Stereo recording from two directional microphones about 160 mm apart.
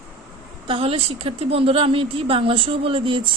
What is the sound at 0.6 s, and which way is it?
A woman's voice, 35° right (ahead or behind).